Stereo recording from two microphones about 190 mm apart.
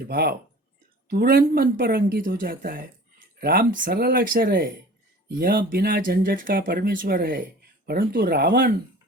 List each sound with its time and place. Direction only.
0.1 s speech: 55° right (ahead or behind)